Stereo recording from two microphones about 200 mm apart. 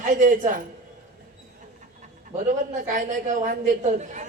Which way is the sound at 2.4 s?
40° right (ahead or behind).